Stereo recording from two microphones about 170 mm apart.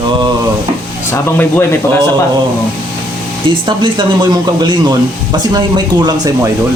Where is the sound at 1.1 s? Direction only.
15° left (ahead or behind).